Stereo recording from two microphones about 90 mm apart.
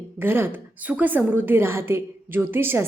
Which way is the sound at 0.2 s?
25° right (ahead or behind).